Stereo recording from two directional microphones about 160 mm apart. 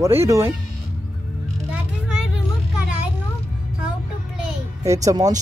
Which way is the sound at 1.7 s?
5° right (ahead or behind).